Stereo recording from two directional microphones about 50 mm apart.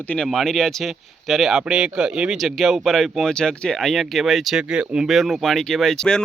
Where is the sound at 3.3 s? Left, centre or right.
Centre.